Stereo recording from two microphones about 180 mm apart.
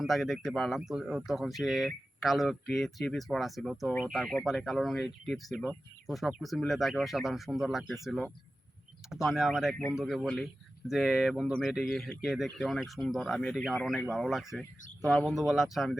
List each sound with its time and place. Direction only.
0.0 s speech: centre (ahead or behind)